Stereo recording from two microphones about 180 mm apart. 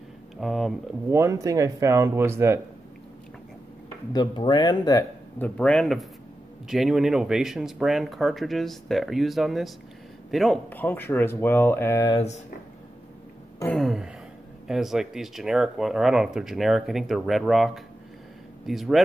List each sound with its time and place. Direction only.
0.4 s speech: centre (ahead or behind)
1.1 s speech: 15° right (ahead or behind)
4.1 s speech: 25° left (ahead or behind)
5.4 s speech: 5° left (ahead or behind)
13.7 s speech: centre (ahead or behind)